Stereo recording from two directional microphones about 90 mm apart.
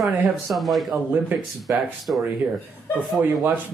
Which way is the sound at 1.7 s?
25° right (ahead or behind).